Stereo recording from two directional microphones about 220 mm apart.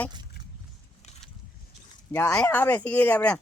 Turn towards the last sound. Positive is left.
turn(degrees=5)  # may be behind; listen again after turning